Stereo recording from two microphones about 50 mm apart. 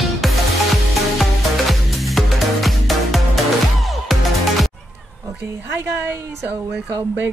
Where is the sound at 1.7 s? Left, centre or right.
Centre.